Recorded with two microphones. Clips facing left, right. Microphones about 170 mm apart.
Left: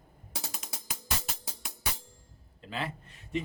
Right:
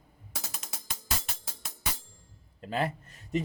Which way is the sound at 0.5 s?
5° left (ahead or behind).